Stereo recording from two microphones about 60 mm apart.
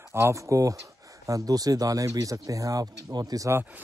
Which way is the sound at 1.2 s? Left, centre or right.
Right.